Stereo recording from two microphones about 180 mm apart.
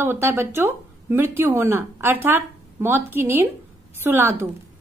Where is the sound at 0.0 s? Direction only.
10° right (ahead or behind).